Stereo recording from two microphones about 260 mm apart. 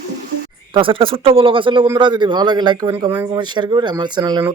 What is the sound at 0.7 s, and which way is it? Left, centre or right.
Speech, centre.